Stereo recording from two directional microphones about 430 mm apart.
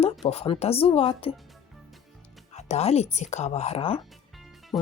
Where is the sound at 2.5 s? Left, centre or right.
Centre.